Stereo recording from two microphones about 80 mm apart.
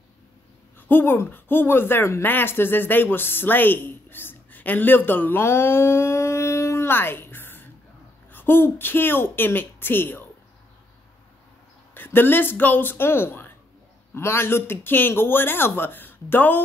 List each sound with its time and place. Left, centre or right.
0.7 s a man's voice: left
11.9 s a man's voice: left